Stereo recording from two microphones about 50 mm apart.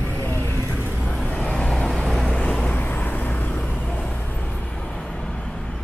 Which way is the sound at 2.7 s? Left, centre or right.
Left.